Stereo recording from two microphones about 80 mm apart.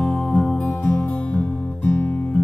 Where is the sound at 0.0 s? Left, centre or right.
Centre.